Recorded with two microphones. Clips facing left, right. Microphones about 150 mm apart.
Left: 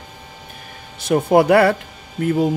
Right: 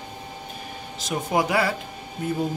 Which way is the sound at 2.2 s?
85° left.